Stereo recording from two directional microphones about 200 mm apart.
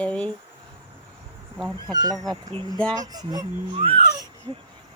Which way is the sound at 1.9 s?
20° right (ahead or behind).